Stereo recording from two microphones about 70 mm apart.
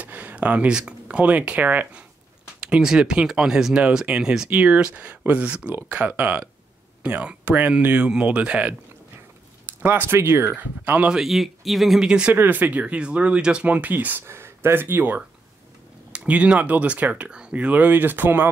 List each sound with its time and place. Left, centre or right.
0.0 s speech: right
2.4 s speech: centre
9.8 s speech: right
10.6 s speech: right
11.1 s speech: centre
12.4 s speech: right